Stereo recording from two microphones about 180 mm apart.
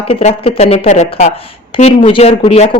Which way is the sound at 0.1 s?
40° left (ahead or behind).